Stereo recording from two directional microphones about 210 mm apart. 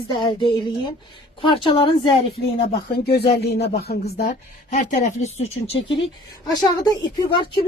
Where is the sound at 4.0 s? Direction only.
35° left (ahead or behind).